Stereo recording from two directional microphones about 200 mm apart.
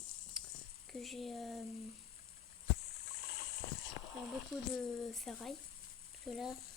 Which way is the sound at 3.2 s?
50° left (ahead or behind).